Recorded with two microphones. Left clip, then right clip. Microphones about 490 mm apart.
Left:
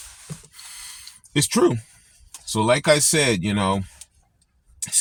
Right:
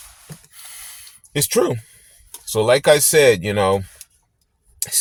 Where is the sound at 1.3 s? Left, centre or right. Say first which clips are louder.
Right 1 dB; right.